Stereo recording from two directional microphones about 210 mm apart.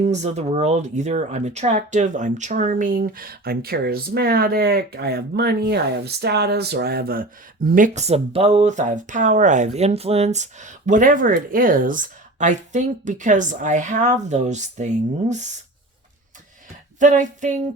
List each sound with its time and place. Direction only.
0.0 s speech: 35° right (ahead or behind)
17.0 s speech: 35° right (ahead or behind)